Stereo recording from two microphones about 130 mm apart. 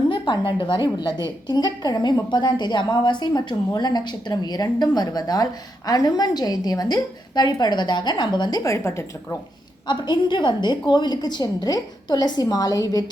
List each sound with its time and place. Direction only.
0.1 s a woman's voice: 40° left (ahead or behind); by 9.4 s 20° left (ahead or behind)
9.8 s a woman's voice: 35° left (ahead or behind)